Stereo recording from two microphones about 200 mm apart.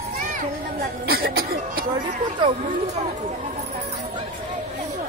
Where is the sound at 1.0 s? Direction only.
50° right (ahead or behind).